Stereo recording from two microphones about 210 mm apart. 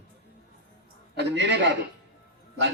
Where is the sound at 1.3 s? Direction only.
55° right (ahead or behind).